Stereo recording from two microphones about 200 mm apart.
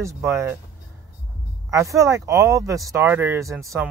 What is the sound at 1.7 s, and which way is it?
Speech, 15° right (ahead or behind).